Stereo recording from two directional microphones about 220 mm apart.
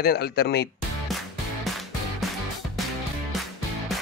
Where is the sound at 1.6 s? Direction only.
Centre (ahead or behind).